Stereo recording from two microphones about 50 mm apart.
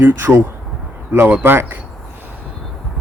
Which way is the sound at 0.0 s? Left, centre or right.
Right.